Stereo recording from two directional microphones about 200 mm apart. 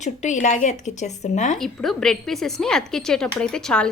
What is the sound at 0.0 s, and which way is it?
Speech, 35° left (ahead or behind).